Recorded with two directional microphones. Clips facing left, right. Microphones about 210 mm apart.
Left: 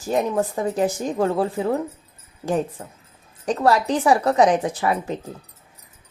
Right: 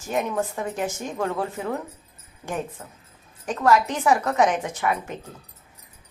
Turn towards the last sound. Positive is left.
turn(degrees=35)  # may be behind; listen again after turning